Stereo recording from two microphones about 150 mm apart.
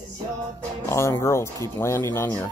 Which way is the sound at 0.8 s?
20° left (ahead or behind).